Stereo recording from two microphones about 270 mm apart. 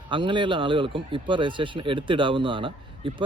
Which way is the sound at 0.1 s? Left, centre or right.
Centre.